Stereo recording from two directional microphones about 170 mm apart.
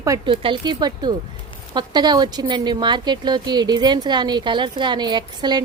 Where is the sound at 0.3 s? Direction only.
30° right (ahead or behind).